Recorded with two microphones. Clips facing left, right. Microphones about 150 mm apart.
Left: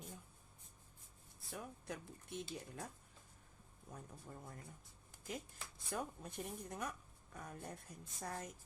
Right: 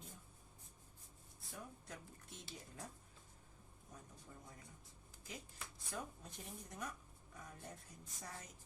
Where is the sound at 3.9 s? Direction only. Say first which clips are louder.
Left 5 dB; 55° left (ahead or behind).